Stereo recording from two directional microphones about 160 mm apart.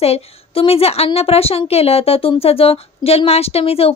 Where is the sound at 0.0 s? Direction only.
40° left (ahead or behind).